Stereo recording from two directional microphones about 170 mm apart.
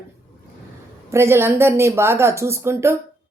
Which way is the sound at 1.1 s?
15° right (ahead or behind).